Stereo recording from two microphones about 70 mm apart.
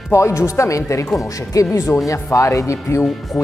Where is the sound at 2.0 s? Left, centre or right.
Left.